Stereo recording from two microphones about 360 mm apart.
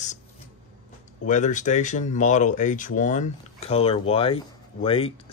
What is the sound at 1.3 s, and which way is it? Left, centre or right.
Speech, centre.